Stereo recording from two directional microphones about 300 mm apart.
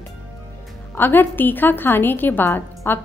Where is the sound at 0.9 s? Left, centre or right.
Centre.